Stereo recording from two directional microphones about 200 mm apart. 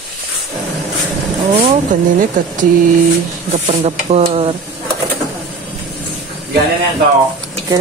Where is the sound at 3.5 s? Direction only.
35° right (ahead or behind).